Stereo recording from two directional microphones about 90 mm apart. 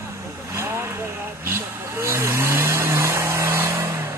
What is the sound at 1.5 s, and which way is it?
Vehicle, 30° right (ahead or behind).